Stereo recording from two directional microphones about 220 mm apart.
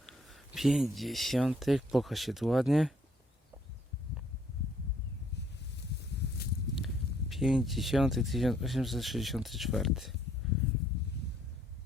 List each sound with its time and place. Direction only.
0.0 s speech: centre (ahead or behind)
5.7 s a sound: 50° left (ahead or behind)
6.7 s speech: centre (ahead or behind)